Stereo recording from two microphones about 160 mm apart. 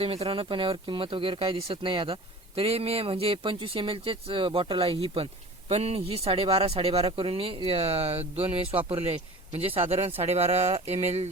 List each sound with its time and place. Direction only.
0.0 s speech: 35° right (ahead or behind)